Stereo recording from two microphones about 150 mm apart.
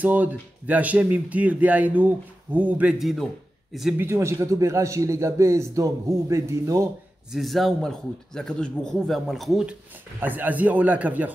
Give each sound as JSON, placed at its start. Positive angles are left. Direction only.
{"t": 0.0, "sound": "a man's voice", "side_deg": -10}
{"t": 4.0, "sound": "a man's voice", "side_deg": -20}
{"t": 7.3, "sound": "a man's voice", "side_deg": 0}
{"t": 10.2, "sound": "speech", "side_deg": -10}